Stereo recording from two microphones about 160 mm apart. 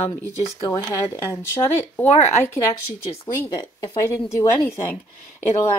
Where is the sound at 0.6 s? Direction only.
30° left (ahead or behind).